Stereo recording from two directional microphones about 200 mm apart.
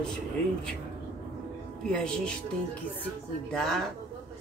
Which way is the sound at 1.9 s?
5° left (ahead or behind).